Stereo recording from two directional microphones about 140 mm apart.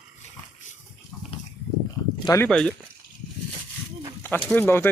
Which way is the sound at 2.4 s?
5° left (ahead or behind).